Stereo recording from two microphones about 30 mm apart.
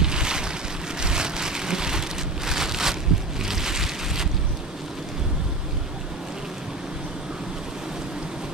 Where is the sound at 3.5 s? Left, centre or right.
Centre.